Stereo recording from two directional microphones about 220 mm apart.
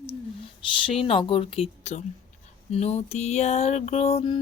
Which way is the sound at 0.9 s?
25° left (ahead or behind).